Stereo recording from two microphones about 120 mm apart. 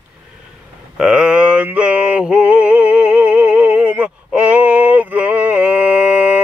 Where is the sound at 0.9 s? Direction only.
5° right (ahead or behind).